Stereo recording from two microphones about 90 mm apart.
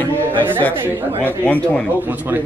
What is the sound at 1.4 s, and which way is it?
Speech, 15° left (ahead or behind).